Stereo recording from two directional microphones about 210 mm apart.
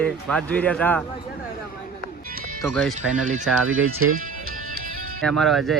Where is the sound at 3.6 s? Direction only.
75° right (ahead or behind).